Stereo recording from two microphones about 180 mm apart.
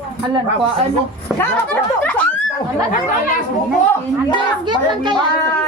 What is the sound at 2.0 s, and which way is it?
Snicker, 5° left (ahead or behind).